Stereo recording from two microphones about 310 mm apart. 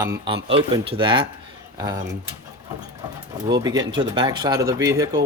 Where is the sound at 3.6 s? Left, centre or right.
Centre.